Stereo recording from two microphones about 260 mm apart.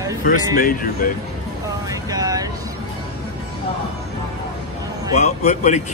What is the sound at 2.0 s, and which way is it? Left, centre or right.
Vehicle, centre.